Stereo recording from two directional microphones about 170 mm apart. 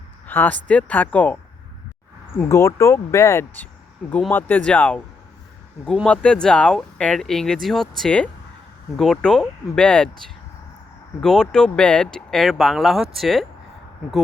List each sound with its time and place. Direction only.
0.3 s speech: 10° left (ahead or behind)
2.5 s speech: 15° left (ahead or behind)
11.2 s speech: 5° left (ahead or behind)